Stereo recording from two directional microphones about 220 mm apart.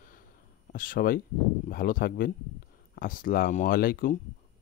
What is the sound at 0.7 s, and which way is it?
Speech, 40° left (ahead or behind).